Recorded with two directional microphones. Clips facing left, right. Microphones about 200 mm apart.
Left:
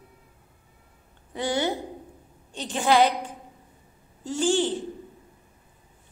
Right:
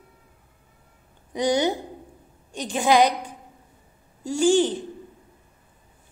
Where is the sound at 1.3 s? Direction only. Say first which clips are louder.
Right 4 dB; 15° right (ahead or behind).